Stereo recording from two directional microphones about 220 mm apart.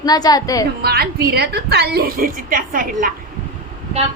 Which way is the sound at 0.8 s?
45° right (ahead or behind).